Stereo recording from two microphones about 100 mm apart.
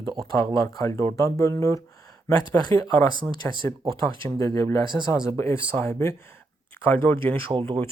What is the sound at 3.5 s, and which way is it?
Speech, 50° right (ahead or behind).